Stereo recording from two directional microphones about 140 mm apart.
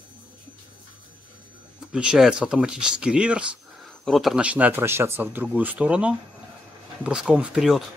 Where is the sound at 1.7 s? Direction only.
5° right (ahead or behind).